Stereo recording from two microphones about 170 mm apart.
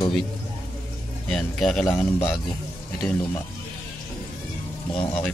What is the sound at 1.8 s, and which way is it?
Speech, 15° left (ahead or behind).